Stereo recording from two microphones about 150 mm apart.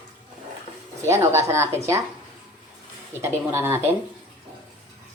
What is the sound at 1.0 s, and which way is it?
Speech, 15° right (ahead or behind).